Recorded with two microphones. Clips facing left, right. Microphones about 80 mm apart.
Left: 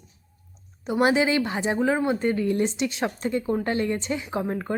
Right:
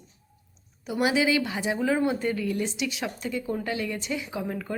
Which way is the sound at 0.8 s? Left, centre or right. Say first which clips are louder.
Left 3 dB; left.